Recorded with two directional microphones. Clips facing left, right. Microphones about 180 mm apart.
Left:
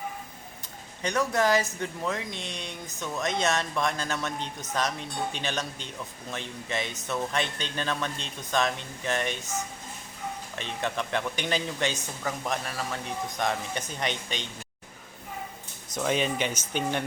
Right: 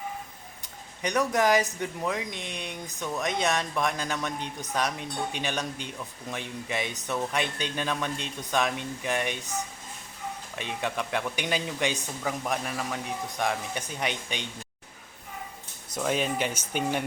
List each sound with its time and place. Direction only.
1.0 s speech: 15° right (ahead or behind)
10.5 s speech: 10° right (ahead or behind)
16.0 s speech: 5° right (ahead or behind)